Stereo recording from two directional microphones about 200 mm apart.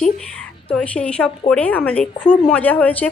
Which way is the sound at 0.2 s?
5° left (ahead or behind).